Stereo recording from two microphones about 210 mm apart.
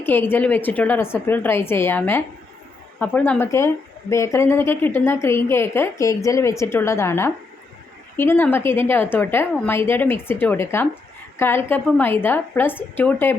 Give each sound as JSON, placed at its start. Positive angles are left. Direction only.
{"t": 0.0, "sound": "a woman's voice", "side_deg": 10}